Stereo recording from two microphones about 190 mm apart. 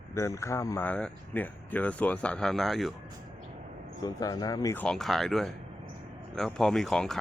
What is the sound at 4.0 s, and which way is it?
Speech, 20° left (ahead or behind).